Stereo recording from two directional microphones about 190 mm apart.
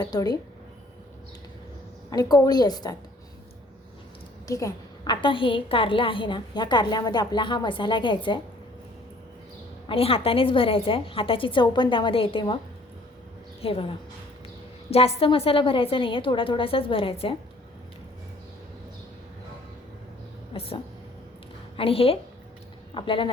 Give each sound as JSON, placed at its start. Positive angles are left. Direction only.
{"t": 0.0, "sound": "a woman's voice", "side_deg": 20}
{"t": 2.0, "sound": "a woman's voice", "side_deg": 20}
{"t": 4.4, "sound": "a woman's voice", "side_deg": 15}
{"t": 9.9, "sound": "a woman's voice", "side_deg": 30}
{"t": 13.6, "sound": "a woman's voice", "side_deg": 30}
{"t": 20.5, "sound": "a woman's voice", "side_deg": 30}
{"t": 21.8, "sound": "a woman's voice", "side_deg": 30}